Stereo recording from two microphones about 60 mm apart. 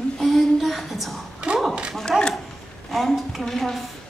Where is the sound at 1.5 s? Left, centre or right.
Centre.